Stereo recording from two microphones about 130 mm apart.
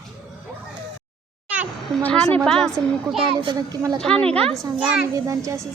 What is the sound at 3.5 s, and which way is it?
Speech, 30° right (ahead or behind).